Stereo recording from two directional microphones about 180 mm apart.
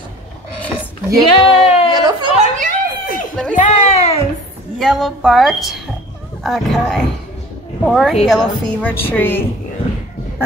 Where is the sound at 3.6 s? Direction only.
40° left (ahead or behind).